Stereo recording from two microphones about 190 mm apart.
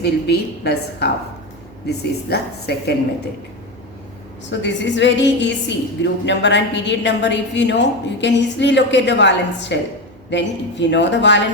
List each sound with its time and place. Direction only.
0.0 s a woman's voice: 60° left (ahead or behind)
4.6 s a woman's voice: 70° left (ahead or behind)